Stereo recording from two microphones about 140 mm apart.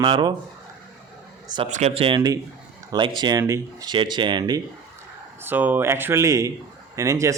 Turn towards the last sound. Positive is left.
turn(degrees=-20)  # may be behind; listen again after turning